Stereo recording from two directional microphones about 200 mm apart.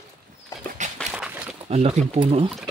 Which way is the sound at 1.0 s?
5° right (ahead or behind).